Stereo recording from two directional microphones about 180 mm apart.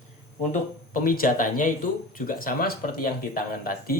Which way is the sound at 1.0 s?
50° left (ahead or behind).